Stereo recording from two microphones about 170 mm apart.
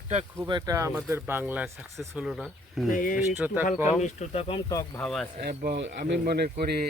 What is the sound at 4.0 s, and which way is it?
Speech, 40° left (ahead or behind).